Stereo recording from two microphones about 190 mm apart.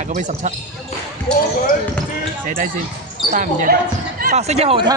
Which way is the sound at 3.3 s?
45° right (ahead or behind).